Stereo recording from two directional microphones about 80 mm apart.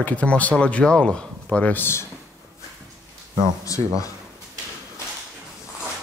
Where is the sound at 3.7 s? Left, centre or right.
Left.